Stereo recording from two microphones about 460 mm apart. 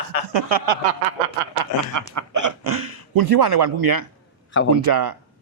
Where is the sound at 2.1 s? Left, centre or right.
Right.